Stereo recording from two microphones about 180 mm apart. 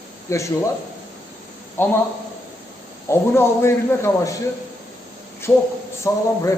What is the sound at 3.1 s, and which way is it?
A man's voice, 15° left (ahead or behind).